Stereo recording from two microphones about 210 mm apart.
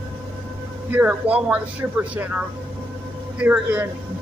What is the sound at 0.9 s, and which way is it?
Speech, 5° right (ahead or behind).